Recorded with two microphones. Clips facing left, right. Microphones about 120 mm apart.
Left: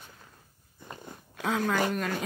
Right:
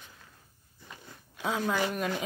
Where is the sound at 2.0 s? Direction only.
10° right (ahead or behind).